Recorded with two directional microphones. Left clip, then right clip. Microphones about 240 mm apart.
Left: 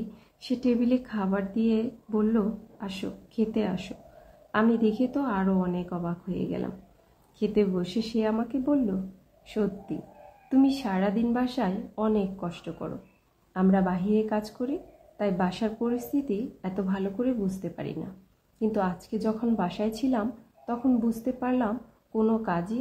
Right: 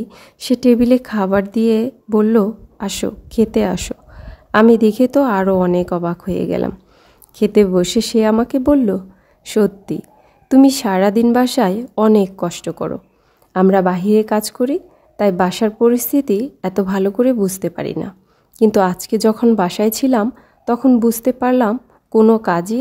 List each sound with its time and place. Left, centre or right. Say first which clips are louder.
0.1 s a woman's voice: right 14 dB; right